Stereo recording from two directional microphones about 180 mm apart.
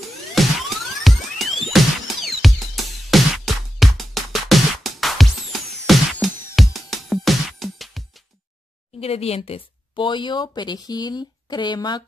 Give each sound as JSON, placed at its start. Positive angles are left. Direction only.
{"t": 0.4, "sound": "music", "side_deg": 0}
{"t": 9.0, "sound": "a woman's voice", "side_deg": 35}